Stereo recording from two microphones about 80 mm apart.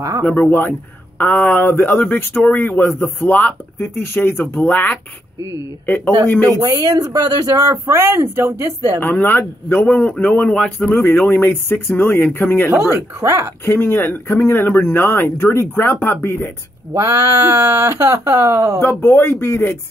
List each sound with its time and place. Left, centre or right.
0.2 s speech: left
6.6 s speech: right
9.0 s speech: left
11.4 s speech: left
12.9 s speech: right
13.7 s speech: left
16.9 s speech: right
18.8 s speech: left